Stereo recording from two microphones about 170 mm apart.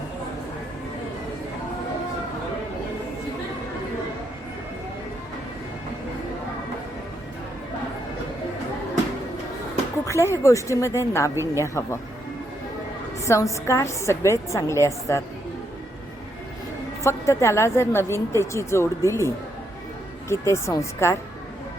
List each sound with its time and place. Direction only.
10.1 s a woman's voice: 15° left (ahead or behind)
13.2 s a woman's voice: 15° left (ahead or behind)
17.0 s a woman's voice: 15° left (ahead or behind)
20.3 s a woman's voice: 15° left (ahead or behind)